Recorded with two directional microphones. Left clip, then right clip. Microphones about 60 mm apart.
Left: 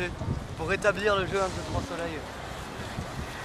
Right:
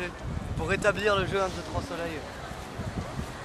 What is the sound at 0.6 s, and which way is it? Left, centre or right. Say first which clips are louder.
Speech: even; centre.